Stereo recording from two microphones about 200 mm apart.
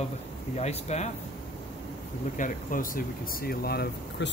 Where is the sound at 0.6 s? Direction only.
35° left (ahead or behind).